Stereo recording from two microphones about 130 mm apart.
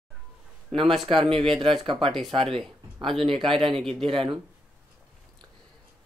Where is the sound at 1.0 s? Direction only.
45° right (ahead or behind).